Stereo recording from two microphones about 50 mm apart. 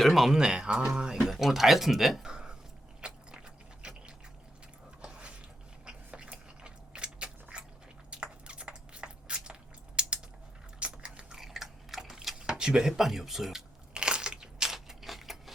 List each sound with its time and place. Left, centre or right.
0.0 s speech: centre
0.3 s speech: centre
2.3 s a sound: centre
7.5 s biting: right
8.1 s a sound: right
10.8 s biting: right
11.3 s biting: centre
12.4 s speech: centre
13.9 s crunch: centre